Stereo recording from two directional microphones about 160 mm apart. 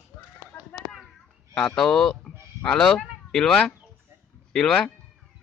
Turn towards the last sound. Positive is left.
turn(degrees=5)  # may be behind; listen again after turning